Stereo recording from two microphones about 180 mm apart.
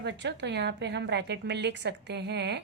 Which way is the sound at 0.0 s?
75° right (ahead or behind).